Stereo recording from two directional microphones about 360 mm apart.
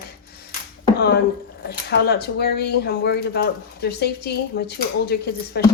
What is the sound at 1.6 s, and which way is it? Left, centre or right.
Speech, left.